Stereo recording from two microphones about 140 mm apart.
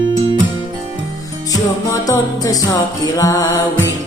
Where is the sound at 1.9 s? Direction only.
25° left (ahead or behind).